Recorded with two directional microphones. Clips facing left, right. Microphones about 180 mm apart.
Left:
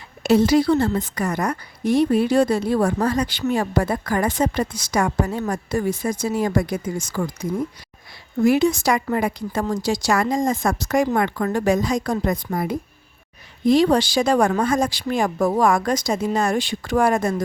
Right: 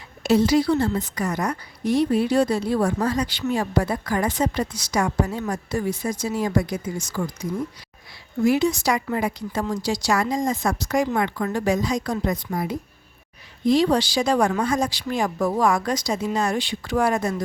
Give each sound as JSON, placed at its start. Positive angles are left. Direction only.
{"t": 0.2, "sound": "a woman's voice", "side_deg": 55}
{"t": 8.4, "sound": "a woman's voice", "side_deg": 55}